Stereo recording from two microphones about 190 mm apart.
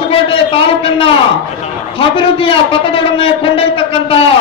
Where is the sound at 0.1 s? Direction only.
30° left (ahead or behind).